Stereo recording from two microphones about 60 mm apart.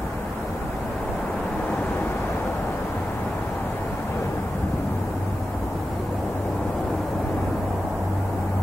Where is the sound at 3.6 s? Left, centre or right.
Left.